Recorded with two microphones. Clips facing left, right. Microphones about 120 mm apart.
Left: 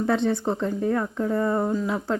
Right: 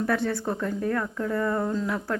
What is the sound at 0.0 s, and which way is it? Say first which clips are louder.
A woman's voice: left 3 dB; 20° left (ahead or behind).